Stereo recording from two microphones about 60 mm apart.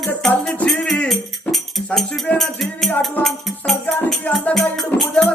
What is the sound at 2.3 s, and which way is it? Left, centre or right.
Music, centre.